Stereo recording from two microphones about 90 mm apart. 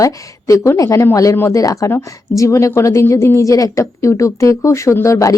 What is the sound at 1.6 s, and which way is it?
Speech, 40° left (ahead or behind).